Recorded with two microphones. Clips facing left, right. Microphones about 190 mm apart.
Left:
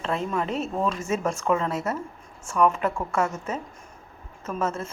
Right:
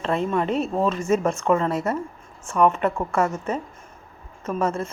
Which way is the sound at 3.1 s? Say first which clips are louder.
Right 3 dB; 10° right (ahead or behind).